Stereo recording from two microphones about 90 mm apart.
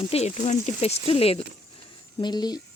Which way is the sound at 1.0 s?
90° left.